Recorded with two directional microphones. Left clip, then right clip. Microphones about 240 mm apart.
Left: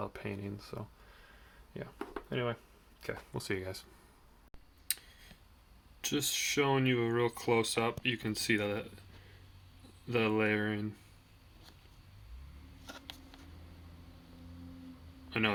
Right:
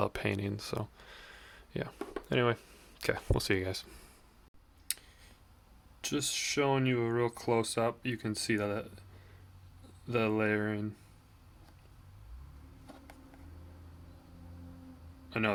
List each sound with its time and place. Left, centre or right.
0.0 s a sound: right
2.3 s speech: right
3.3 s speech: right
6.0 s speech: centre
10.2 s speech: centre
15.3 s a man's voice: centre